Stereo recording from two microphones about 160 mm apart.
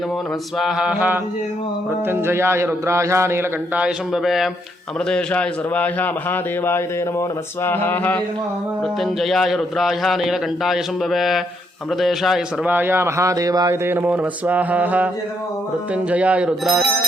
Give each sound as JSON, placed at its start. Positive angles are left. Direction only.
{"t": 0.6, "sound": "speech", "side_deg": -5}
{"t": 3.8, "sound": "a man's voice", "side_deg": 0}
{"t": 9.0, "sound": "a man's voice", "side_deg": 0}
{"t": 12.7, "sound": "speech", "side_deg": -15}